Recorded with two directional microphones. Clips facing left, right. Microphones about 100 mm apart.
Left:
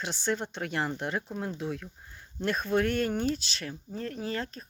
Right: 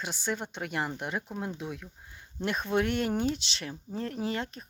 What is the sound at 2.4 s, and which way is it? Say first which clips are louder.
Speech: left 1 dB; 20° right (ahead or behind).